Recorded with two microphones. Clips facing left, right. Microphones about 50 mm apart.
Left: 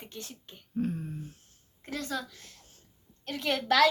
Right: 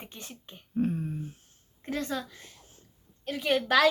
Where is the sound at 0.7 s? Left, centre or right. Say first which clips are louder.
Right 3 dB; centre.